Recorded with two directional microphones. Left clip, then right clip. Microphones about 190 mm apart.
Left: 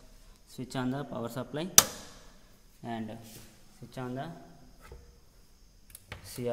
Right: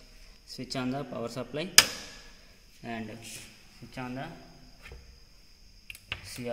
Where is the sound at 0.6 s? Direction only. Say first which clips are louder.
Right 1 dB; 35° left (ahead or behind).